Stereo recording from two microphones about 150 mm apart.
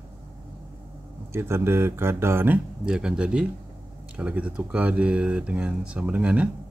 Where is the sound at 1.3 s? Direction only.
15° right (ahead or behind).